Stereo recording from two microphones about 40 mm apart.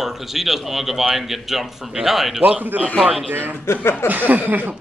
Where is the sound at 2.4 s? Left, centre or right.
Right.